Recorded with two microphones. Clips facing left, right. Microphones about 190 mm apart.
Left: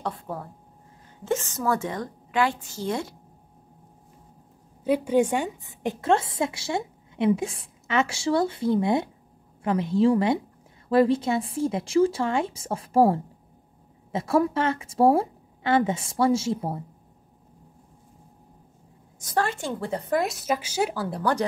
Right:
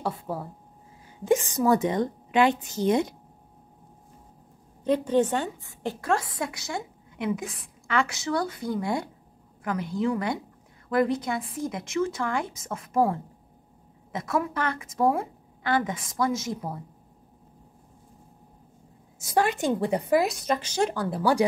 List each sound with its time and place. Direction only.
0.0 s a woman's voice: 5° right (ahead or behind)
4.8 s a woman's voice: 10° left (ahead or behind); by 16.8 s 30° left (ahead or behind)
19.1 s a woman's voice: 10° right (ahead or behind)
20.2 s a woman's voice: centre (ahead or behind)